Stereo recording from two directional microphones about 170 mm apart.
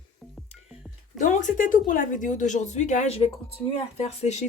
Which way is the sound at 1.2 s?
50° left (ahead or behind).